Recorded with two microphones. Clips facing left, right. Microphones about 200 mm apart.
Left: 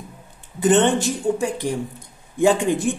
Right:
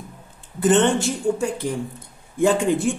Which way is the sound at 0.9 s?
15° left (ahead or behind).